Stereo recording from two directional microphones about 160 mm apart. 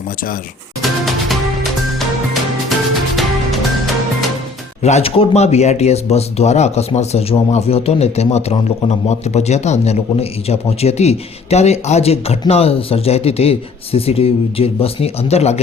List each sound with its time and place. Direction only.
0.8 s music: centre (ahead or behind)
4.8 s speech: 45° left (ahead or behind)